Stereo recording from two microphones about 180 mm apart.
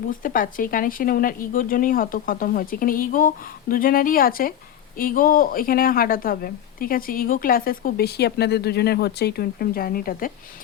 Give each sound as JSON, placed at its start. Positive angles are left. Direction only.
{"t": 0.1, "sound": "speech", "side_deg": 50}